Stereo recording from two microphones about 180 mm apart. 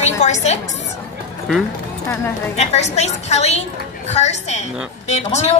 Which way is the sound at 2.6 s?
35° left (ahead or behind).